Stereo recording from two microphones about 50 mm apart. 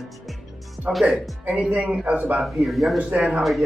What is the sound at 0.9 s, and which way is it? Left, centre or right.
Speech, right.